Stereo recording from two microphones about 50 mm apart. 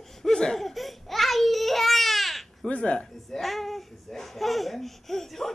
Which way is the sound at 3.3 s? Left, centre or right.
Centre.